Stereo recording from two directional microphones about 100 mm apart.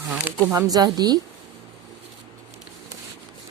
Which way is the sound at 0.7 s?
40° right (ahead or behind).